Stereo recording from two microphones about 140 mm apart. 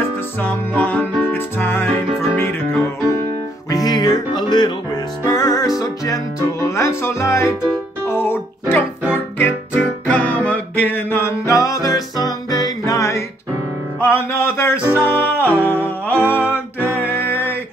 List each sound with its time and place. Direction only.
0.4 s music: 10° left (ahead or behind)
3.7 s music: 30° left (ahead or behind)